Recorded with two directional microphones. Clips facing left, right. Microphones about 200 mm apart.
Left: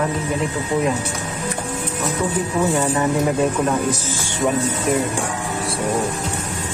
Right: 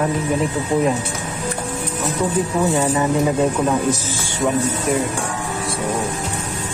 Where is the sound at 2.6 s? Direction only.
15° right (ahead or behind).